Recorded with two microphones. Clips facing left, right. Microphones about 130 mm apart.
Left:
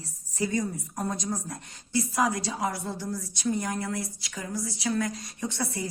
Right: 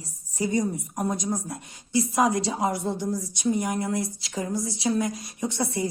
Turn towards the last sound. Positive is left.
turn(degrees=-20)  # may be behind; listen again after turning